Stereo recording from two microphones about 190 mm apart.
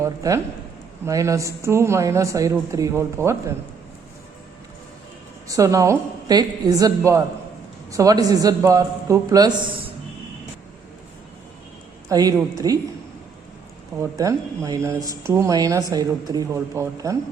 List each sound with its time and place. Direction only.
0.0 s a woman's voice: 15° right (ahead or behind)
5.5 s a woman's voice: 15° right (ahead or behind)
12.0 s a woman's voice: 20° right (ahead or behind)
14.0 s a woman's voice: 15° right (ahead or behind)